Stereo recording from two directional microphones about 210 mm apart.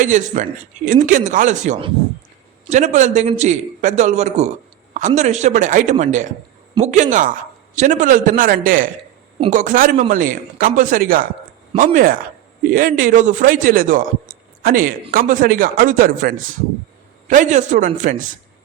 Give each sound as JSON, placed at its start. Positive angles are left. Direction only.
{"t": 0.0, "sound": "a man's voice", "side_deg": -35}